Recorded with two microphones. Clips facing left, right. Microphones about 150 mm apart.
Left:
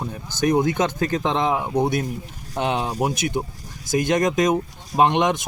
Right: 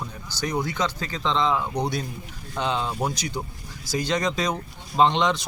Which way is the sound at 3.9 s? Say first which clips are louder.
Left 6 dB; 50° left (ahead or behind).